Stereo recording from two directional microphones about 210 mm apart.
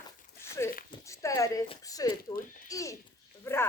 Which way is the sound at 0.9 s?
15° left (ahead or behind).